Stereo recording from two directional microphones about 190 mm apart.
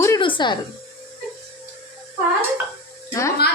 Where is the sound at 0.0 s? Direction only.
20° left (ahead or behind).